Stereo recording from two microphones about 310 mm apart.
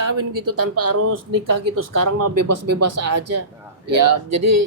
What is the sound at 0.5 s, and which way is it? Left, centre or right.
Speech, right.